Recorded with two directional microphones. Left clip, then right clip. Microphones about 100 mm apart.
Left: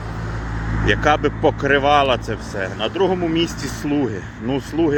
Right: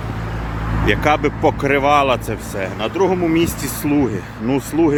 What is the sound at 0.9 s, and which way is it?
Speech, 45° right (ahead or behind).